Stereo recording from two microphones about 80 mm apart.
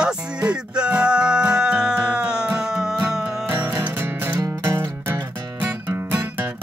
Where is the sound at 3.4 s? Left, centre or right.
Right.